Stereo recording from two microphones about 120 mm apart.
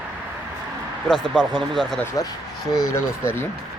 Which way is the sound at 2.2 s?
30° left (ahead or behind).